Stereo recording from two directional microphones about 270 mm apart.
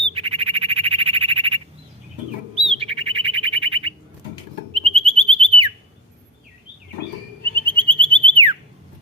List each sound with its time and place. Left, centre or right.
0.1 s bird: right
2.6 s bird: right
4.7 s whistle: right
7.5 s a sound: centre